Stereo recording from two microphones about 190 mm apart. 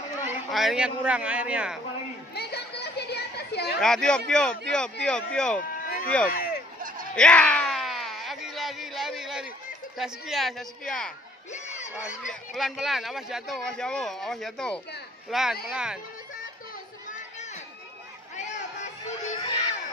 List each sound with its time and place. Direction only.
0.5 s speech: centre (ahead or behind)
2.3 s children playing: 60° left (ahead or behind)
3.8 s speech: 5° left (ahead or behind)
5.6 s a sound: 45° left (ahead or behind)
6.0 s speech: 5° left (ahead or behind)
6.3 s a sound: 55° left (ahead or behind)
7.2 s a sound: 5° left (ahead or behind)
9.9 s speech: centre (ahead or behind)
11.5 s crowd: 40° left (ahead or behind)
11.9 s speech: 5° right (ahead or behind)
19.3 s baby cry: 25° left (ahead or behind)